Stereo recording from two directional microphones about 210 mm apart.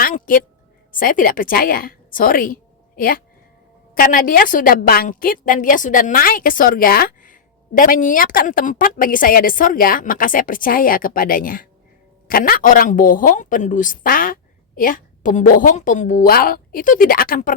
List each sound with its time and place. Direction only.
0.3 s a woman's voice: 40° left (ahead or behind)